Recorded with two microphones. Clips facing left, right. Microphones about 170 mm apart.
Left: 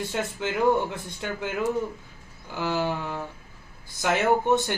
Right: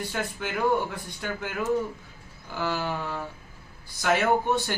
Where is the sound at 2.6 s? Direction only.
20° left (ahead or behind).